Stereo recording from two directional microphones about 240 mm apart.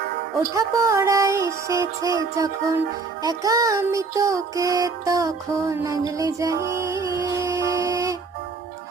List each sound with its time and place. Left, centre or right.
0.5 s music: centre